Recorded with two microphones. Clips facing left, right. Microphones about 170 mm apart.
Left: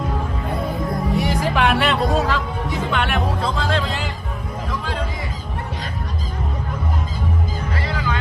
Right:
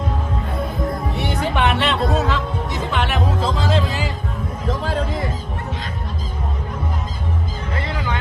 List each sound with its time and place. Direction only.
1.1 s speech: centre (ahead or behind)
7.8 s music: 20° right (ahead or behind)